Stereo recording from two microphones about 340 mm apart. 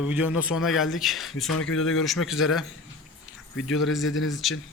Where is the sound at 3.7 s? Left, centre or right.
Centre.